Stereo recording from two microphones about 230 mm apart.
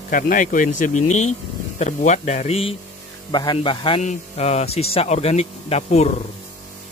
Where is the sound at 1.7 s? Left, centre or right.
Left.